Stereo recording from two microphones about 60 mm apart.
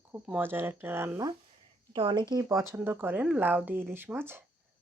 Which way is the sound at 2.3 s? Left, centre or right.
Right.